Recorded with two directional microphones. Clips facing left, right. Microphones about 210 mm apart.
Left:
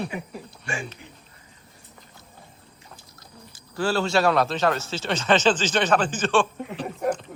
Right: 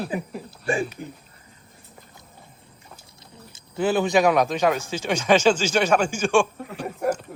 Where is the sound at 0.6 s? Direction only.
35° right (ahead or behind).